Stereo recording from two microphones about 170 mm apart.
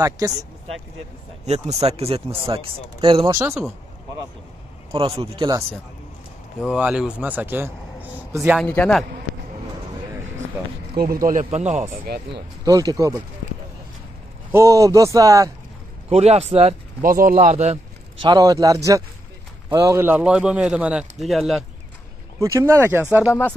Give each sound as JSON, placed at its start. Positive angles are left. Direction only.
{"t": 0.2, "sound": "speech", "side_deg": -20}
{"t": 1.4, "sound": "speech", "side_deg": -40}
{"t": 3.3, "sound": "speech", "side_deg": -15}
{"t": 4.9, "sound": "speech", "side_deg": -35}
{"t": 6.6, "sound": "a man's voice", "side_deg": -5}
{"t": 8.5, "sound": "a man's voice", "side_deg": 5}
{"t": 11.0, "sound": "speech", "side_deg": -60}
{"t": 12.3, "sound": "speech", "side_deg": -25}
{"t": 14.5, "sound": "speech", "side_deg": -20}
{"t": 16.1, "sound": "speech", "side_deg": -40}
{"t": 17.0, "sound": "speech", "side_deg": -55}
{"t": 18.2, "sound": "a man's voice", "side_deg": -25}
{"t": 22.4, "sound": "speech", "side_deg": -15}